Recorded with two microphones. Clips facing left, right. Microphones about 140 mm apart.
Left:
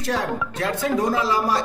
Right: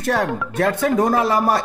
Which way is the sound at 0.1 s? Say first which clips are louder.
Right 4 dB; 55° right (ahead or behind).